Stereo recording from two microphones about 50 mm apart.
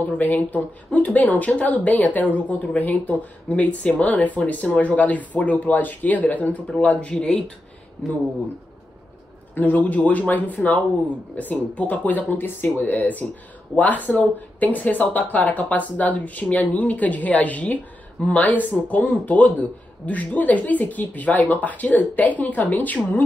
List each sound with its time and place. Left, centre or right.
0.0 s a man's voice: left
9.6 s a man's voice: left